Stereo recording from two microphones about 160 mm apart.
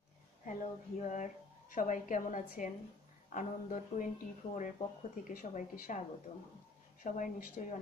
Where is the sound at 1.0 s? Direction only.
50° left (ahead or behind).